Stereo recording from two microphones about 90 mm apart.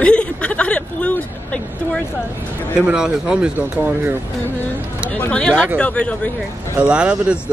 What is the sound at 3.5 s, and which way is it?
Speech, 20° right (ahead or behind).